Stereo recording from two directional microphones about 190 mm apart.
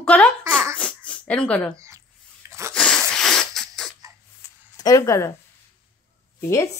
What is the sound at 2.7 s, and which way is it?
Sneeze, 5° left (ahead or behind).